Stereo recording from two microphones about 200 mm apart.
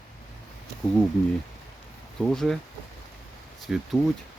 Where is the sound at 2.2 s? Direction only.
Centre (ahead or behind).